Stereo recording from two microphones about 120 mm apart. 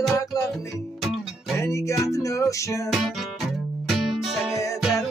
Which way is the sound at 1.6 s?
25° left (ahead or behind).